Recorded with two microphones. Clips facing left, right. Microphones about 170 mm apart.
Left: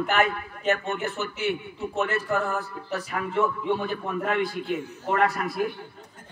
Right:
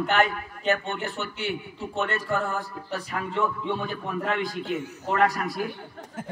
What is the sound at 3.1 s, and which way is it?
Speech, 40° left (ahead or behind).